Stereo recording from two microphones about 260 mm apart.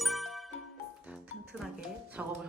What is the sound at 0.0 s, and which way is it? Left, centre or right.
Ding, centre.